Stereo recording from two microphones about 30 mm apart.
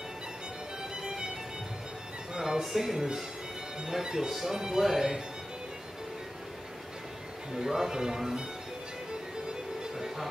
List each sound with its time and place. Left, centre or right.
1.0 s music: right
2.3 s music: right
2.6 s speech: centre; by 4.3 s right
4.3 s speech: centre
7.5 s speech: right